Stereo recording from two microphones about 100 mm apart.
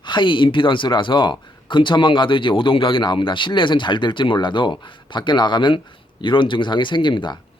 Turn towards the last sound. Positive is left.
turn(degrees=50)  # may be behind; listen again after turning